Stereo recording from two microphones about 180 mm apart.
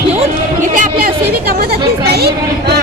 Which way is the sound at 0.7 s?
50° right (ahead or behind).